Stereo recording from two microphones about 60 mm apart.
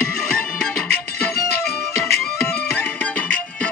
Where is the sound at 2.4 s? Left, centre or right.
Left.